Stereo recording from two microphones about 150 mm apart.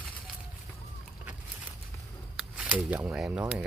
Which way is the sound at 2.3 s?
5° right (ahead or behind).